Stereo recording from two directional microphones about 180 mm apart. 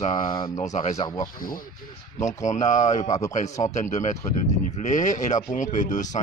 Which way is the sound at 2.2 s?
40° left (ahead or behind).